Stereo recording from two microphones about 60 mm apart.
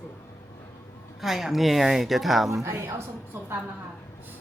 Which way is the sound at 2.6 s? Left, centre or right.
Right.